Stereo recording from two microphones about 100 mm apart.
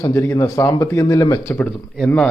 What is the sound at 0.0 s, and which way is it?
A man's voice, 30° left (ahead or behind).